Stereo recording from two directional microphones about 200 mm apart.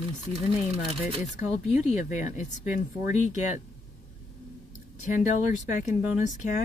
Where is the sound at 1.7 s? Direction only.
40° left (ahead or behind).